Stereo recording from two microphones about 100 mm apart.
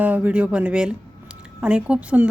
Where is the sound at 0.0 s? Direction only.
15° right (ahead or behind).